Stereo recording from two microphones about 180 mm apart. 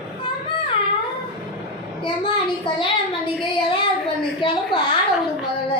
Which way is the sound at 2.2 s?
25° left (ahead or behind).